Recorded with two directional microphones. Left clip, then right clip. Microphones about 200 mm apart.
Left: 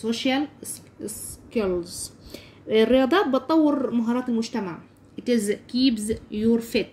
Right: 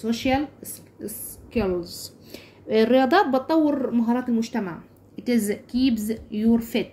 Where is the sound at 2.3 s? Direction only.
10° left (ahead or behind).